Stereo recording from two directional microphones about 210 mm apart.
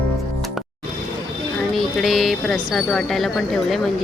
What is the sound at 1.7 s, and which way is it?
Speech, centre (ahead or behind).